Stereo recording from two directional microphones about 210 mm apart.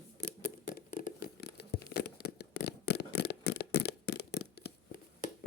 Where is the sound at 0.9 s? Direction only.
40° left (ahead or behind).